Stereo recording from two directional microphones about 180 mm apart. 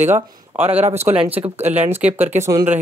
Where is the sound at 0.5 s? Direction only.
10° right (ahead or behind).